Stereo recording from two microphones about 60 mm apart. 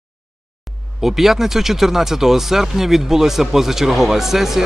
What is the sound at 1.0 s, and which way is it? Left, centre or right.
A man's voice, centre.